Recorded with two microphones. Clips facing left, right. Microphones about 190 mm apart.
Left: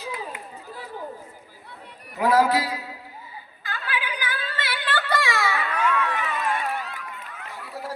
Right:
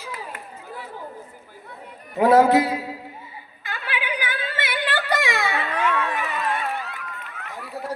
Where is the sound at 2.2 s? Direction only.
25° right (ahead or behind).